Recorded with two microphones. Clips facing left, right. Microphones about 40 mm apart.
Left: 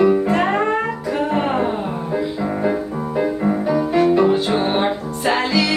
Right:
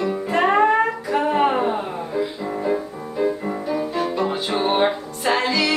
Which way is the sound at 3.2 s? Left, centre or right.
Left.